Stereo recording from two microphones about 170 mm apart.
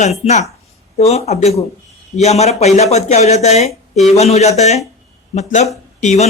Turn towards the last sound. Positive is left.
turn(degrees=40)  # may be behind; listen again after turning